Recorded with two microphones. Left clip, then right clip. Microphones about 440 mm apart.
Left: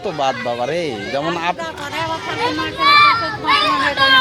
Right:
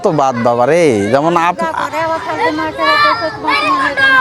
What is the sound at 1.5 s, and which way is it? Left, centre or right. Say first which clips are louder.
Speech: right 8 dB; left.